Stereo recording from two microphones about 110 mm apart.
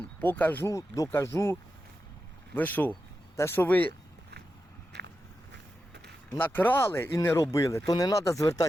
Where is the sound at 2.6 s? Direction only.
15° left (ahead or behind).